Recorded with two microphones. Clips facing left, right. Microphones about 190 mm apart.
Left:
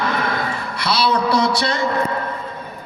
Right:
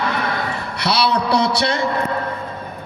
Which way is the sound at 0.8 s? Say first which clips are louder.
Even; 65° right (ahead or behind).